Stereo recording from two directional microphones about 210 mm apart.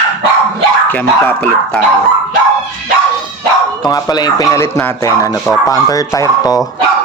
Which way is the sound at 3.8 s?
20° left (ahead or behind).